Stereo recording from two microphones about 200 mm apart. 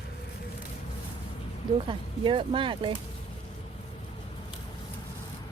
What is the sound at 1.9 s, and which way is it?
Speech, 25° right (ahead or behind).